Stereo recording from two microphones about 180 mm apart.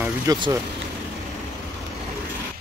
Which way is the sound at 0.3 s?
20° right (ahead or behind).